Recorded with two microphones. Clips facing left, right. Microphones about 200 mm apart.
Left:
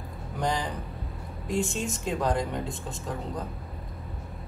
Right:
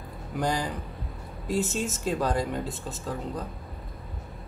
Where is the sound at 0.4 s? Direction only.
10° right (ahead or behind).